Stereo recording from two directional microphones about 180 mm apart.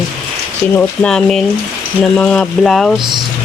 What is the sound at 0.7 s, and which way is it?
Speech, 5° left (ahead or behind).